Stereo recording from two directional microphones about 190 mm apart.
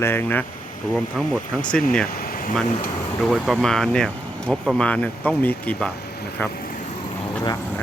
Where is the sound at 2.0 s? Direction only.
50° left (ahead or behind).